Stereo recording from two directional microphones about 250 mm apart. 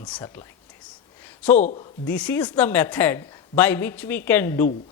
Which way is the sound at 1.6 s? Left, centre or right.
Left.